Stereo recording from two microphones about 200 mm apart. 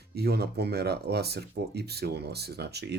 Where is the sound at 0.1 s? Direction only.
55° right (ahead or behind).